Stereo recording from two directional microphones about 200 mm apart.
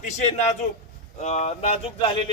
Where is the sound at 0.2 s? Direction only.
35° left (ahead or behind).